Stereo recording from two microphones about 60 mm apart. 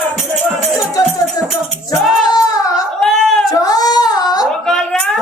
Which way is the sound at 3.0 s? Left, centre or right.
Centre.